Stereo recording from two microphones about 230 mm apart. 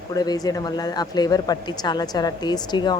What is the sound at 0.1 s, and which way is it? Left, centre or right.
Speech, centre.